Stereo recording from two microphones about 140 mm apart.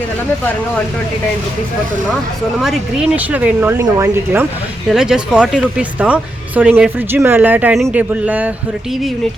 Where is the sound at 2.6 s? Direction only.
5° right (ahead or behind).